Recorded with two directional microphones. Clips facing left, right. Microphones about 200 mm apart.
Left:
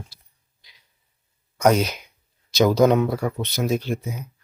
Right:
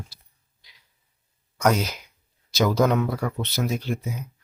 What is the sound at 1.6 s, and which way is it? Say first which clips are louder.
Speech: left 4 dB; 20° left (ahead or behind).